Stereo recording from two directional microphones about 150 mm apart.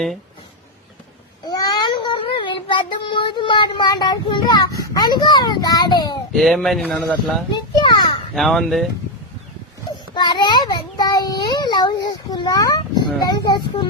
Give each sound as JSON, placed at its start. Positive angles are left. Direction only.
{"t": 1.5, "sound": "child singing", "side_deg": 25}
{"t": 6.3, "sound": "speech", "side_deg": 0}
{"t": 7.5, "sound": "children playing", "side_deg": 30}
{"t": 8.4, "sound": "speech", "side_deg": 0}
{"t": 10.2, "sound": "a child's voice", "side_deg": 30}